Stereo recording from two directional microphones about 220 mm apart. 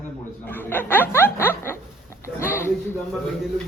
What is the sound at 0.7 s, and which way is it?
A woman's voice, 10° left (ahead or behind).